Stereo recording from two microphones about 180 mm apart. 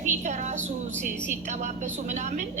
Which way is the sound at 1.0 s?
40° right (ahead or behind).